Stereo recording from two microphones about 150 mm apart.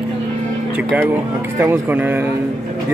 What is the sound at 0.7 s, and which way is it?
Speech, 10° right (ahead or behind).